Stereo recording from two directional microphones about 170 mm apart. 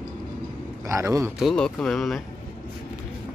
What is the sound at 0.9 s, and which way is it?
Speech, 15° right (ahead or behind).